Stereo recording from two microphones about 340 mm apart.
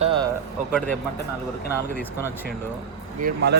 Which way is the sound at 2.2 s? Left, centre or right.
Centre.